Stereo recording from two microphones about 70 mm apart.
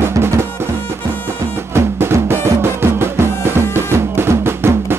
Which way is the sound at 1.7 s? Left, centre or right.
Right.